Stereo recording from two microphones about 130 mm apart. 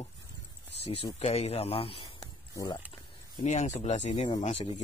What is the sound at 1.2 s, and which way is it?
Speech, 55° left (ahead or behind).